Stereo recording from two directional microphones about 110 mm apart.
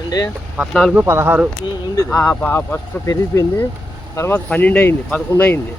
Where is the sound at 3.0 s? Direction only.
30° left (ahead or behind).